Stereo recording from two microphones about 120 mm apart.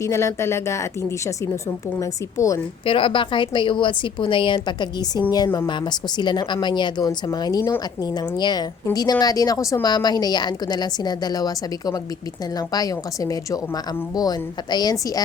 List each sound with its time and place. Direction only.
0.0 s speech: 25° left (ahead or behind)
2.0 s speech: 25° left (ahead or behind)
2.8 s a woman's voice: 45° left (ahead or behind)